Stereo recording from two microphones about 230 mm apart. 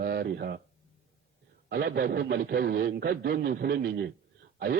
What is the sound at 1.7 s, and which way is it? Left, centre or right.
Speech, right.